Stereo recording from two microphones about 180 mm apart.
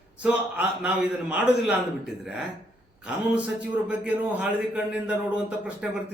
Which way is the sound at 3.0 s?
5° right (ahead or behind).